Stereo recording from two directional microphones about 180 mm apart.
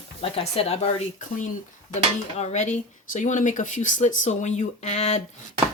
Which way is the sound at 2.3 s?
40° left (ahead or behind).